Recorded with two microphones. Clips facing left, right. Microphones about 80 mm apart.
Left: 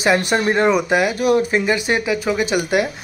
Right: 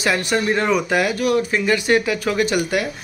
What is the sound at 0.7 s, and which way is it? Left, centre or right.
Speech, centre.